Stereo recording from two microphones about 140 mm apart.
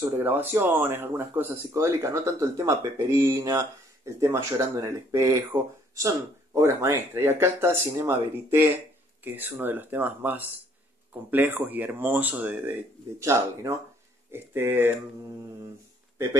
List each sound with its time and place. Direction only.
0.2 s speech: 15° right (ahead or behind)